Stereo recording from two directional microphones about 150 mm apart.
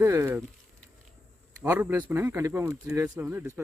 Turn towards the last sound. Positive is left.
turn(degrees=-10)  # may be behind; listen again after turning